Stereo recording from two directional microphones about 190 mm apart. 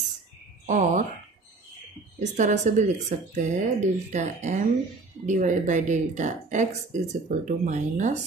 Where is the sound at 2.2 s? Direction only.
40° right (ahead or behind).